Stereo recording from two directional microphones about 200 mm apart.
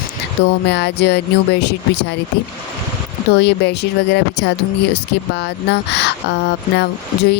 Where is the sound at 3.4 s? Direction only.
55° left (ahead or behind).